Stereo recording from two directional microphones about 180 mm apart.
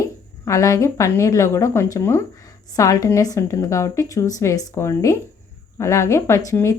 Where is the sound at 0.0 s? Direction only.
20° left (ahead or behind).